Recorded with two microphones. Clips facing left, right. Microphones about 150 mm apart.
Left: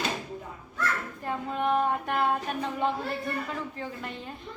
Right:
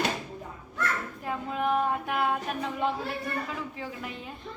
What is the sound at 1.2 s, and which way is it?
A child's voice, centre (ahead or behind).